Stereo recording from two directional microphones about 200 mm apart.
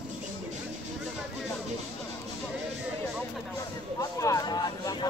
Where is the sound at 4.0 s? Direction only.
15° left (ahead or behind).